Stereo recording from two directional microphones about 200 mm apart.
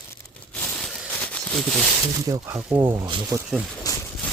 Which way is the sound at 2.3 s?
15° right (ahead or behind).